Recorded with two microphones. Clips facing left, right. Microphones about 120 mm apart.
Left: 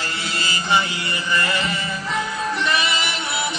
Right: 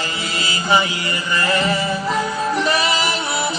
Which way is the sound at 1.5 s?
40° right (ahead or behind).